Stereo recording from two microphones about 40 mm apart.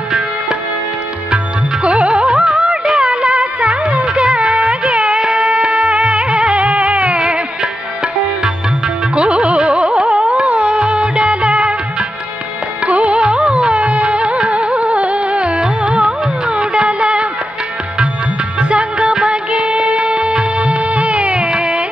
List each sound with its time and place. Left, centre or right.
1.3 s music: right
8.8 s music: right
9.9 s carnatic music: centre
10.3 s music: right
12.8 s music: right
18.6 s music: right